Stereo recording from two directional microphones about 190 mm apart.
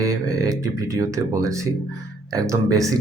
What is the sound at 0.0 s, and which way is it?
Speech, 15° right (ahead or behind).